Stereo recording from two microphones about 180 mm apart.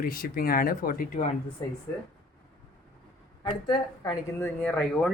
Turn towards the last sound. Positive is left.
turn(degrees=5)  # may be behind; listen again after turning